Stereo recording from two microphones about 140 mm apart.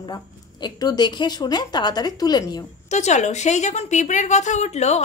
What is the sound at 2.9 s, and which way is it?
A woman's voice, 55° left (ahead or behind).